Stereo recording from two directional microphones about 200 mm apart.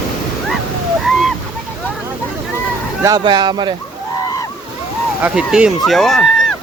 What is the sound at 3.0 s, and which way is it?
Speech, 20° right (ahead or behind).